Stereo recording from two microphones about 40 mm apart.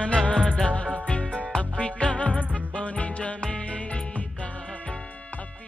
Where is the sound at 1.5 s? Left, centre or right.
Left.